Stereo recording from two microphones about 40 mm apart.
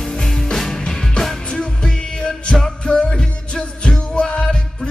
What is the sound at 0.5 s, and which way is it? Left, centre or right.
Music, centre.